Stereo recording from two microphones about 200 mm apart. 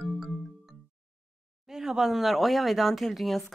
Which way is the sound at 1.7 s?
Centre (ahead or behind).